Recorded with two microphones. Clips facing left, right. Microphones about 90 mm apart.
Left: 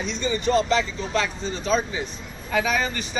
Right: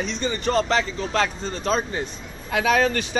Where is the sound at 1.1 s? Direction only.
55° right (ahead or behind).